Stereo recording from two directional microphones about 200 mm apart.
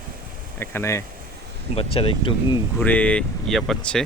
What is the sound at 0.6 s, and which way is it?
Speech, 10° left (ahead or behind).